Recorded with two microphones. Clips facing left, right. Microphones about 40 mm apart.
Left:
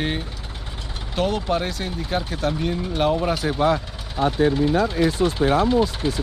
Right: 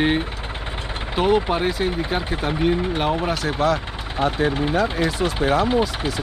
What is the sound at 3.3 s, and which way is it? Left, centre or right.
Speech, centre.